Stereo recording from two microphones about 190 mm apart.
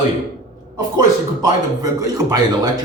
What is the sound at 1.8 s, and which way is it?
Speech, 20° right (ahead or behind).